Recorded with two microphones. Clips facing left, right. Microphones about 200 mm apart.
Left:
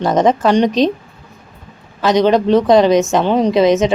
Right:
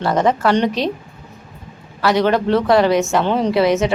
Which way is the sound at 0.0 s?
20° left (ahead or behind).